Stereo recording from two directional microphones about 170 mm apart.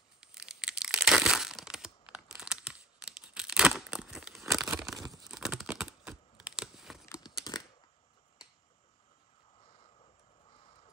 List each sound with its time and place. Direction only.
0.2 s crushing: 5° right (ahead or behind)
5.3 s crumpling: centre (ahead or behind)
7.1 s tearing: 25° left (ahead or behind)
9.6 s a sound: 30° left (ahead or behind)